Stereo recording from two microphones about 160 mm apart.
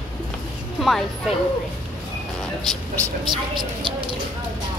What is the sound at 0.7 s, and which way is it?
Speech, centre (ahead or behind).